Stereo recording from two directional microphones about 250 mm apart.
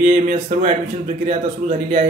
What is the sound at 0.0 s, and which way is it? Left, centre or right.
Speech, right.